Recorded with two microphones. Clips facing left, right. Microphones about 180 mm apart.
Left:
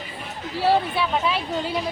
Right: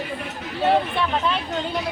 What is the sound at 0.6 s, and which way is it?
Speech, 5° left (ahead or behind).